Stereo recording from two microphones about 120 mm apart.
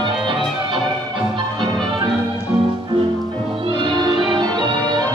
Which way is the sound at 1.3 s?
40° right (ahead or behind).